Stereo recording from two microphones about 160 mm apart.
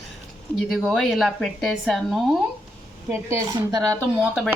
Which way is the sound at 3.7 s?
20° right (ahead or behind).